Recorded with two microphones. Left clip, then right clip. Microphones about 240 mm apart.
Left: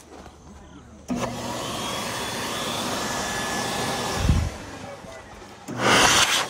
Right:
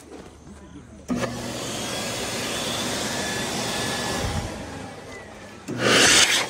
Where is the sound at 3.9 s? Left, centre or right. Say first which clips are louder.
Even; left.